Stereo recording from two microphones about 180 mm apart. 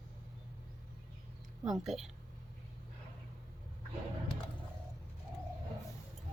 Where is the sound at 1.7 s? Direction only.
Centre (ahead or behind).